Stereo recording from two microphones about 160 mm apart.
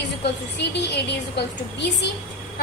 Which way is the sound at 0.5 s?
90° left.